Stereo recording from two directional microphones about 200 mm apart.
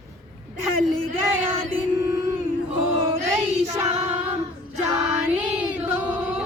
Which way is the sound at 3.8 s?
35° right (ahead or behind).